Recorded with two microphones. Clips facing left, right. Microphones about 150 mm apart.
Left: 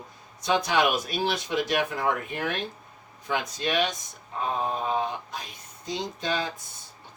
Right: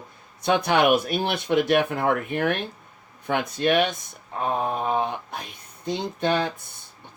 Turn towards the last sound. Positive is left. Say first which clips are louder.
# right 6 dB
turn(degrees=-60)  # may be behind; listen again after turning